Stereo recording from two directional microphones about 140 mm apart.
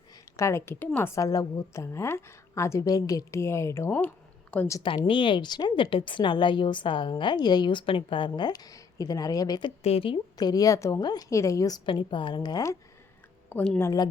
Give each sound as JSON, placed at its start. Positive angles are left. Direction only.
{"t": 0.3, "sound": "a woman's voice", "side_deg": 20}
{"t": 4.8, "sound": "a woman's voice", "side_deg": 35}
{"t": 9.8, "sound": "a woman's voice", "side_deg": 45}
{"t": 11.9, "sound": "a woman's voice", "side_deg": 35}
{"t": 13.5, "sound": "a woman's voice", "side_deg": 10}